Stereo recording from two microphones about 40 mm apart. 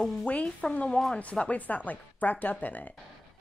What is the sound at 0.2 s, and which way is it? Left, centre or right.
Speech, left.